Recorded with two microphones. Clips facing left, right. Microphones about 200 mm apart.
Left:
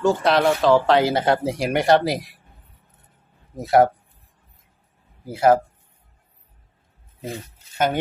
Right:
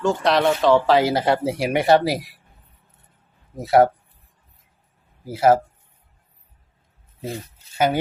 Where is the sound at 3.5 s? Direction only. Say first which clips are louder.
Right 1 dB; centre (ahead or behind).